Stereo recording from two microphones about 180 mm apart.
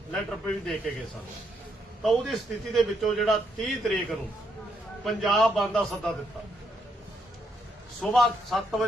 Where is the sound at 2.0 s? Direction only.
Centre (ahead or behind).